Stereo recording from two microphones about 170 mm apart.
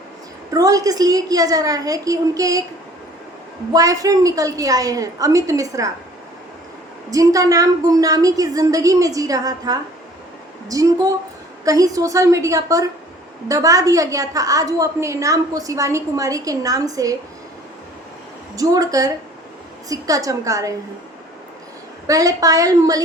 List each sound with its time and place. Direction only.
0.5 s a woman's voice: 20° right (ahead or behind)
3.7 s a woman's voice: 20° right (ahead or behind)
7.1 s a woman's voice: 20° right (ahead or behind)
18.5 s a woman's voice: 20° right (ahead or behind)
22.0 s a woman's voice: 20° right (ahead or behind)